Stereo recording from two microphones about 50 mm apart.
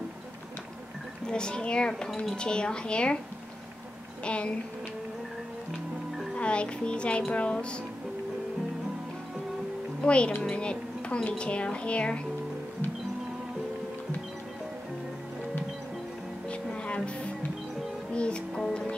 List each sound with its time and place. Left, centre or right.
1.2 s speech: centre
4.2 s speech: left
6.3 s speech: left
10.0 s a woman's voice: left
16.4 s music: left
18.1 s music: left